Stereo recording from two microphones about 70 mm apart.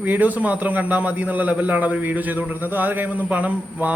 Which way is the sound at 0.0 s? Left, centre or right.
Right.